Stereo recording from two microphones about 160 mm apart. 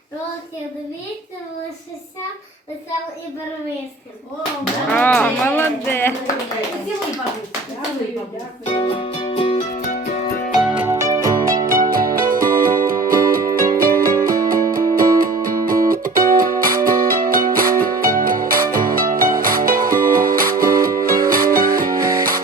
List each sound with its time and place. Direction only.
4.9 s speech: 10° left (ahead or behind)
8.6 s music: 35° left (ahead or behind)
9.6 s music: 45° left (ahead or behind)
10.6 s music: 10° right (ahead or behind)
10.9 s music: 20° right (ahead or behind)
11.6 s music: 60° right (ahead or behind)